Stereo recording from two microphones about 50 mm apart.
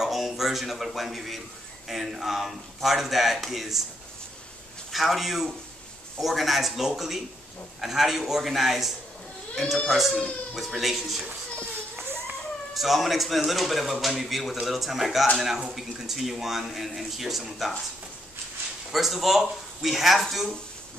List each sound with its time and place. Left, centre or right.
0.0 s a man's voice: centre
4.9 s a man's voice: centre
11.6 s children playing: right
12.7 s a man's voice: centre
18.9 s a man's voice: centre